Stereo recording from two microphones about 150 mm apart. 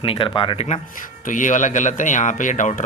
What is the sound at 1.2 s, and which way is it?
Speech, 60° left (ahead or behind).